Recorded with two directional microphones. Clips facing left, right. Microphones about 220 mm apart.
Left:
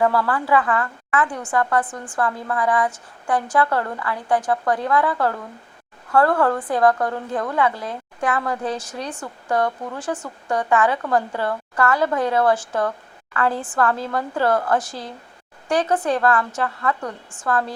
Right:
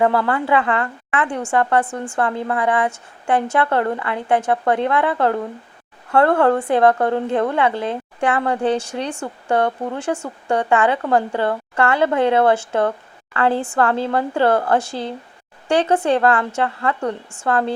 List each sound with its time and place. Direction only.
0.0 s a woman's voice: 25° right (ahead or behind)